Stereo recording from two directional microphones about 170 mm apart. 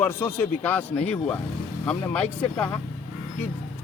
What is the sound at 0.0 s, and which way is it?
Speech, 10° left (ahead or behind).